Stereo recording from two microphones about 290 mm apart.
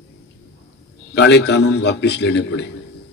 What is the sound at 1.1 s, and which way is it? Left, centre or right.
A man's voice, left.